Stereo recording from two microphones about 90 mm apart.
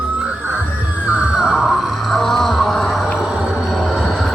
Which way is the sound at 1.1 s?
10° right (ahead or behind).